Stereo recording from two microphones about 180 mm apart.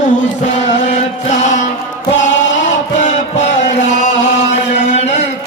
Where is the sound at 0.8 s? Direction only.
40° left (ahead or behind).